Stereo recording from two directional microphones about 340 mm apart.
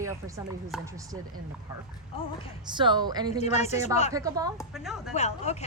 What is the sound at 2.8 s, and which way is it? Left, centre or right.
Speech, centre.